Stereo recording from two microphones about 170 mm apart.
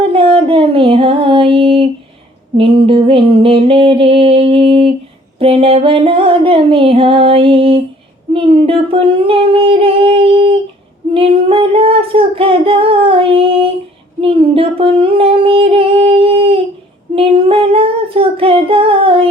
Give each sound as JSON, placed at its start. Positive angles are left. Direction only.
{"t": 0.1, "sound": "music", "side_deg": -35}
{"t": 2.6, "sound": "female singing", "side_deg": -30}